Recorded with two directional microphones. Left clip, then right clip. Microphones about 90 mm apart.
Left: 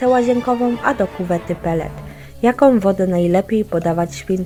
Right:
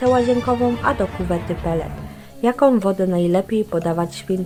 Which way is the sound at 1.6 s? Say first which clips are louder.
Left 2 dB; 30° left (ahead or behind).